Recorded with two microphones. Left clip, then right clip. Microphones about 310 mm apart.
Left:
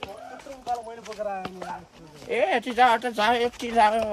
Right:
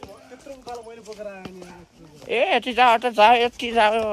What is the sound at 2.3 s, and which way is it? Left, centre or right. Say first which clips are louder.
Speech: right 3 dB; right.